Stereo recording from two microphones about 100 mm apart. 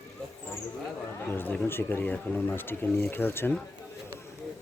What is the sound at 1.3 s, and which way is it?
Speech, 20° left (ahead or behind).